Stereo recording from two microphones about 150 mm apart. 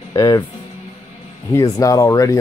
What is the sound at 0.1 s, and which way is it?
Speech, 25° left (ahead or behind).